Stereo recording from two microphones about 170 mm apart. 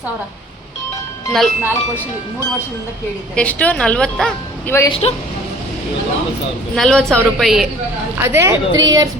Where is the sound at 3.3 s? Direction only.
10° left (ahead or behind).